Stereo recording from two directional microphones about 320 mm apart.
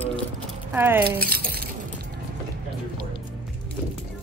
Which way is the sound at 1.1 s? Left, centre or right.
Right.